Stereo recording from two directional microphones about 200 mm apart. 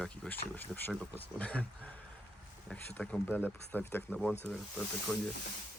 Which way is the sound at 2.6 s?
5° left (ahead or behind).